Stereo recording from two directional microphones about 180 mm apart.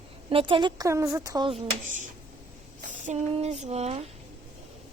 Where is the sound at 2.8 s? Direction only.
40° right (ahead or behind).